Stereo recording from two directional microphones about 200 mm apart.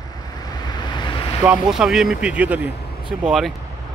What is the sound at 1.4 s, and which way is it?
Speech, 5° right (ahead or behind).